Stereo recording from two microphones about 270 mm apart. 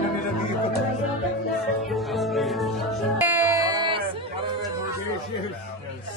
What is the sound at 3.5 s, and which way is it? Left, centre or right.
Music, centre.